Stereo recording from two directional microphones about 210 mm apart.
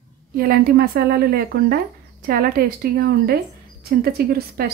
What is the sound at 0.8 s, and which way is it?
Speech, 45° right (ahead or behind).